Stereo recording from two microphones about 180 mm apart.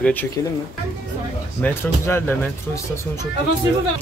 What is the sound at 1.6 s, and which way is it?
Speech, 10° left (ahead or behind).